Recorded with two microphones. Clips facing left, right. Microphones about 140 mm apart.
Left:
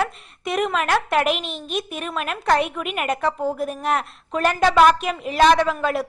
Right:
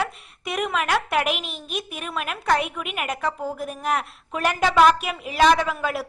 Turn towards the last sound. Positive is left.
turn(degrees=-5)  # may be behind; listen again after turning